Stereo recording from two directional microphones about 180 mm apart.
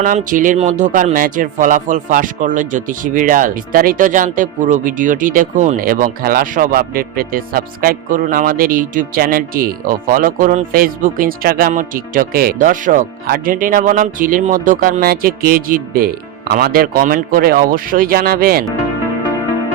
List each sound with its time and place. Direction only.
0.0 s speech: 45° right (ahead or behind)